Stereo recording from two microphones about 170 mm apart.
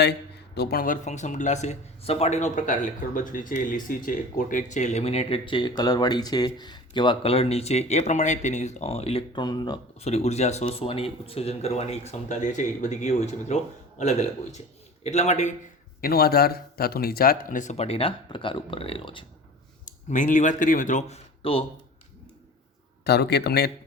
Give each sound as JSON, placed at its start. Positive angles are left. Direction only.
{"t": 0.5, "sound": "speech", "side_deg": 65}
{"t": 10.0, "sound": "speech", "side_deg": 40}
{"t": 16.0, "sound": "speech", "side_deg": 65}
{"t": 19.8, "sound": "speech", "side_deg": 50}
{"t": 21.4, "sound": "speech", "side_deg": 35}
{"t": 23.0, "sound": "speech", "side_deg": 70}